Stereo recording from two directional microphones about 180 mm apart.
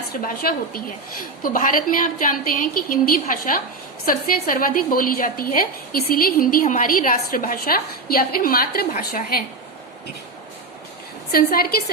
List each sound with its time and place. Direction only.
0.1 s a woman's voice: 55° left (ahead or behind)
11.3 s a woman's voice: 55° left (ahead or behind)